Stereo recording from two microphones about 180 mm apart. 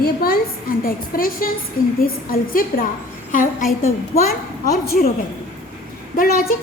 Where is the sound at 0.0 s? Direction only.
55° left (ahead or behind).